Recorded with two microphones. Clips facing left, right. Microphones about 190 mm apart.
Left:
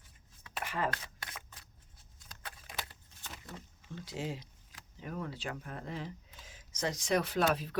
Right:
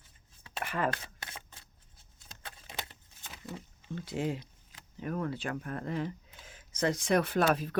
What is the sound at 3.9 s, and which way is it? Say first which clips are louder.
Speech: right 6 dB; 55° right (ahead or behind).